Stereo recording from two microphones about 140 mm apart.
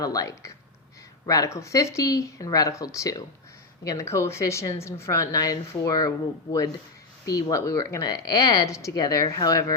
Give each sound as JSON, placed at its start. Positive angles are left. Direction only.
{"t": 0.0, "sound": "a woman's voice", "side_deg": 25}